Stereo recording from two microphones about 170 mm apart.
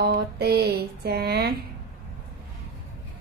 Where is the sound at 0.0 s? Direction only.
70° right (ahead or behind).